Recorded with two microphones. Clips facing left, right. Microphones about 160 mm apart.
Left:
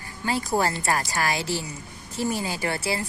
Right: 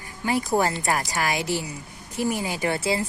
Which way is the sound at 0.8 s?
20° right (ahead or behind).